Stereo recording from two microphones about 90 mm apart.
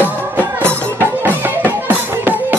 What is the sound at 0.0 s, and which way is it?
Music, 20° left (ahead or behind).